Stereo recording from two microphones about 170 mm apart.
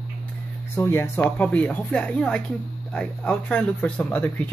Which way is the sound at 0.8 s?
15° left (ahead or behind).